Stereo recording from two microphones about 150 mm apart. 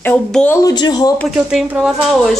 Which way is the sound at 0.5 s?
25° left (ahead or behind).